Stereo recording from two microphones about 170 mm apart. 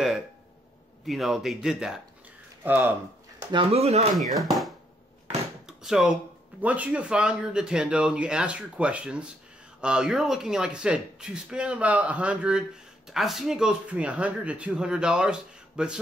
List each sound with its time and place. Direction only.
1.0 s speech: centre (ahead or behind)
3.5 s speech: 35° right (ahead or behind)
4.2 s speech: centre (ahead or behind)
5.7 s a sound: 5° right (ahead or behind)
6.6 s speech: 10° right (ahead or behind)